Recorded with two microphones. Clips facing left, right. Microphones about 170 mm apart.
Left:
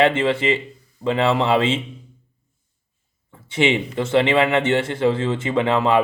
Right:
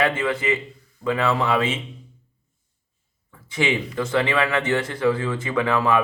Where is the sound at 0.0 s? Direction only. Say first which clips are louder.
Left 5 dB; 25° left (ahead or behind).